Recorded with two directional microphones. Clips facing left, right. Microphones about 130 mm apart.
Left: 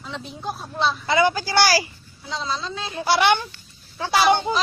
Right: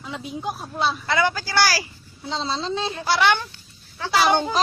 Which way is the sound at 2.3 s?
30° right (ahead or behind).